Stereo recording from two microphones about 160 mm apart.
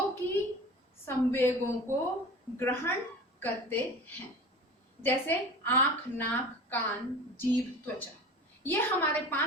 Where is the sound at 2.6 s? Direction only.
15° left (ahead or behind).